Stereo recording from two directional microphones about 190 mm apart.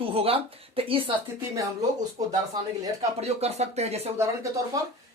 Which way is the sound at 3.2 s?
35° right (ahead or behind).